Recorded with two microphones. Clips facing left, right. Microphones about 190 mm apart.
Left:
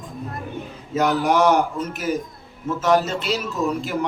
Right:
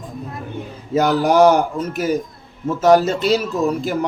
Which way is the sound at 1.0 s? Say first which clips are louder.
Right 5 dB; 35° right (ahead or behind).